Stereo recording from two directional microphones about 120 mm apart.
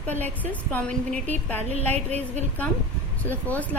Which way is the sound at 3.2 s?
15° left (ahead or behind).